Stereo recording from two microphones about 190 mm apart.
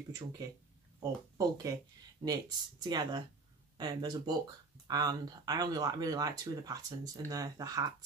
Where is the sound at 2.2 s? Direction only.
20° right (ahead or behind).